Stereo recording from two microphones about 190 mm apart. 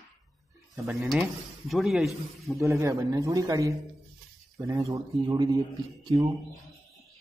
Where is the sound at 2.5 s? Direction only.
15° right (ahead or behind).